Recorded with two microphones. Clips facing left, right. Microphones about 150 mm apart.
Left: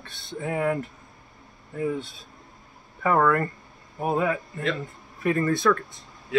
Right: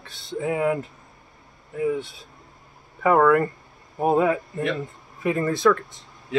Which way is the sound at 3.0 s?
15° right (ahead or behind).